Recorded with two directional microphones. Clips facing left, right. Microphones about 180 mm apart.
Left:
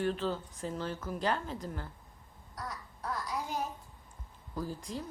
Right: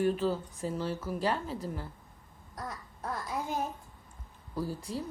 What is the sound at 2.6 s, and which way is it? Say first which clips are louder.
Speech: right 1 dB; 20° right (ahead or behind).